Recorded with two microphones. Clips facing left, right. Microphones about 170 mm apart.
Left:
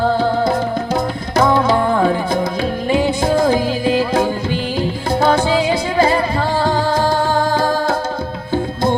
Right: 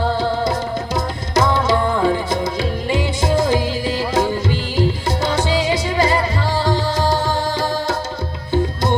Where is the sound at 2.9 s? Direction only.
55° left (ahead or behind).